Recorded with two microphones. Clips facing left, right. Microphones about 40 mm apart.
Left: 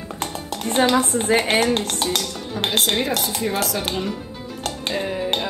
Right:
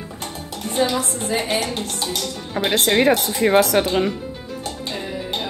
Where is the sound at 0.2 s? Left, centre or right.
Left.